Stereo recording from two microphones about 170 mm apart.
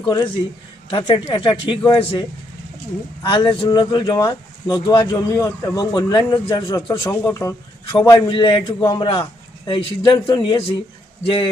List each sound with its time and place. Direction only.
0.0 s a man's voice: 25° left (ahead or behind)
3.2 s a man's voice: 30° left (ahead or behind)
7.9 s a man's voice: 30° left (ahead or behind)